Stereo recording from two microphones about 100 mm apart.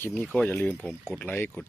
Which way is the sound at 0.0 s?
20° left (ahead or behind).